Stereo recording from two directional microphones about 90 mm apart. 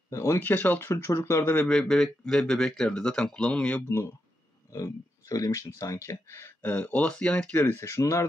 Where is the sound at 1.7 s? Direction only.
5° left (ahead or behind).